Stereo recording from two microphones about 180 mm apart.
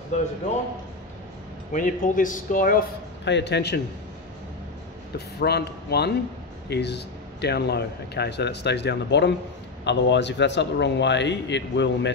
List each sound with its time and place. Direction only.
1.7 s speech: 45° left (ahead or behind)
3.3 s speech: 70° left (ahead or behind)
5.1 s speech: 65° left (ahead or behind)